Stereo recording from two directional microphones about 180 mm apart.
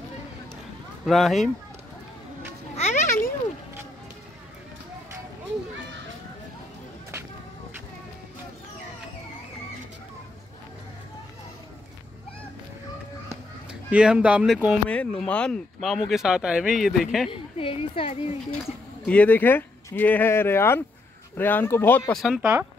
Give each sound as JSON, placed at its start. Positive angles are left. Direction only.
{"t": 1.0, "sound": "speech", "side_deg": 0}
{"t": 2.7, "sound": "children playing", "side_deg": 40}
{"t": 13.7, "sound": "speech", "side_deg": -5}
{"t": 17.3, "sound": "a woman's voice", "side_deg": 30}
{"t": 19.0, "sound": "speech", "side_deg": 10}
{"t": 22.2, "sound": "speech", "side_deg": -5}